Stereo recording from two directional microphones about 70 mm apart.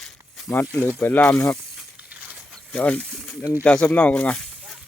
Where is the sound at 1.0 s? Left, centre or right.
Left.